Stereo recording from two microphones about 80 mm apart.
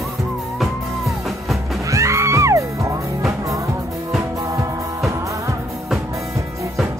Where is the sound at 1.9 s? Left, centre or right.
Right.